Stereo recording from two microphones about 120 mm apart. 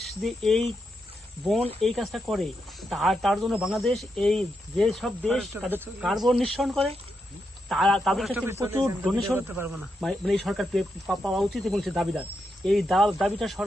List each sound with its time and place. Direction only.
0.0 s speech: centre (ahead or behind)
1.8 s speech: centre (ahead or behind)
8.3 s speech: 20° right (ahead or behind)
8.8 s speech: 5° left (ahead or behind)